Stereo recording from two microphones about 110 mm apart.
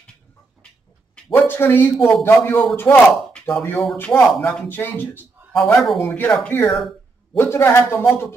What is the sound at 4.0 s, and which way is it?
Speech, 10° left (ahead or behind).